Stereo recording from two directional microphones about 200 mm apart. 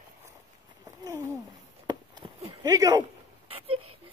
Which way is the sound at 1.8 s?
25° right (ahead or behind).